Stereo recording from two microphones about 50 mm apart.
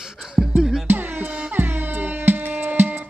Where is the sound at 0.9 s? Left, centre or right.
Right.